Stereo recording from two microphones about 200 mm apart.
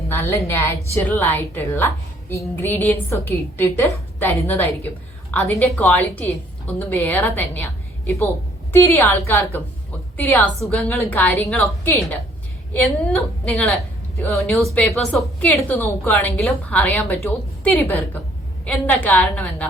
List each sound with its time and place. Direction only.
0.1 s a woman's voice: 10° left (ahead or behind)